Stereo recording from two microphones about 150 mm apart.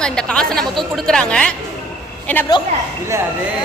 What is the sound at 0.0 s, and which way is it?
A woman's voice, 5° left (ahead or behind).